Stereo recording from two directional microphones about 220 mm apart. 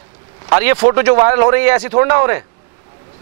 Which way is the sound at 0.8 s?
25° right (ahead or behind).